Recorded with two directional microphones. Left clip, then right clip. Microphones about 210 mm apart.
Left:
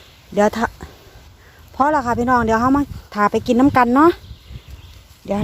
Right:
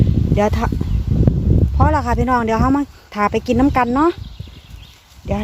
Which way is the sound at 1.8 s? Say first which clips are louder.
Left 2 dB; 10° left (ahead or behind).